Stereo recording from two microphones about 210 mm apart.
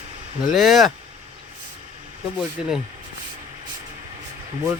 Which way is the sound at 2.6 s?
5° right (ahead or behind).